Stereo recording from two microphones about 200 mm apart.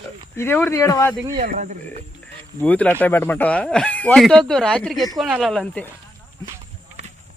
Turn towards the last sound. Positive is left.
turn(degrees=5)  # may be behind; listen again after turning